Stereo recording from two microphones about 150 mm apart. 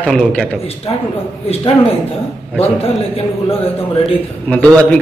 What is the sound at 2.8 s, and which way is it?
Speech, 40° left (ahead or behind).